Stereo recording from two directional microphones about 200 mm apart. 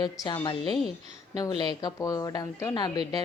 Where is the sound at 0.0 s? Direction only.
20° left (ahead or behind).